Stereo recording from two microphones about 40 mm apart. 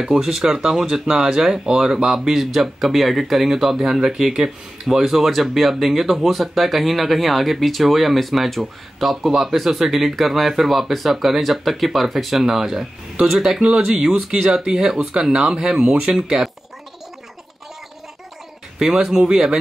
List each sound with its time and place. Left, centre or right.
0.0 s speech: centre
2.1 s speech: centre
13.2 s speech: centre
19.3 s speech: centre